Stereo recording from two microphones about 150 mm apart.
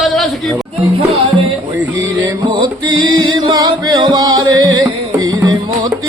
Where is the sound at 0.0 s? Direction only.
Centre (ahead or behind).